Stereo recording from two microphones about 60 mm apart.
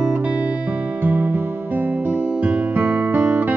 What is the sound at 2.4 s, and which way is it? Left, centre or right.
Music, right.